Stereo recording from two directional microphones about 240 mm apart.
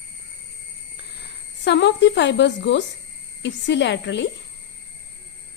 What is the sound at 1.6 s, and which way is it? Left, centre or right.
A woman's voice, left.